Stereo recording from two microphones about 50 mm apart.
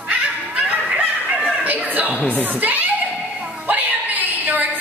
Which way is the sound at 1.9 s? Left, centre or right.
Right.